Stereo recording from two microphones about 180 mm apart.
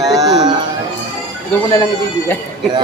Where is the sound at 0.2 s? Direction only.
20° right (ahead or behind).